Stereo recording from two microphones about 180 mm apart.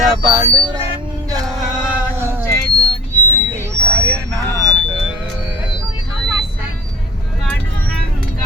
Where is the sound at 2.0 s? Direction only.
10° right (ahead or behind).